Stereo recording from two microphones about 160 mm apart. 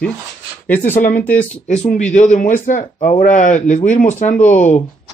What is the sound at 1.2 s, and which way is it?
Speech, 10° left (ahead or behind).